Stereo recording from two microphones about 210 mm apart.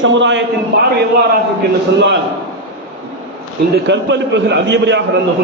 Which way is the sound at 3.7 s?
55° right (ahead or behind).